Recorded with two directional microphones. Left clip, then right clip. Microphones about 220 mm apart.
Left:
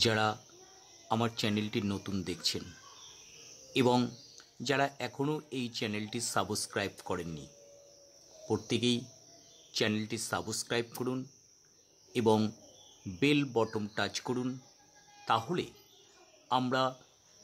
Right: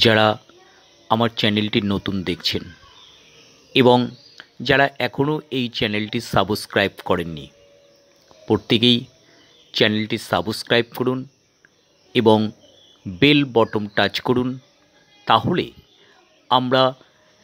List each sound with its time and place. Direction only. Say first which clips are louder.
0.0 s speech: right 14 dB; 20° right (ahead or behind)
3.7 s speech: right 14 dB; 20° right (ahead or behind)
8.5 s speech: right 15 dB; 20° right (ahead or behind)